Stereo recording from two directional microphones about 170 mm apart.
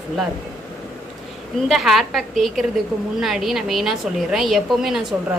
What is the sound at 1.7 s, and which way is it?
A woman's voice, centre (ahead or behind).